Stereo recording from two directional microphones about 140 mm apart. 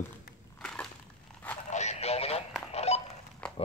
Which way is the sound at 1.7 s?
55° left (ahead or behind).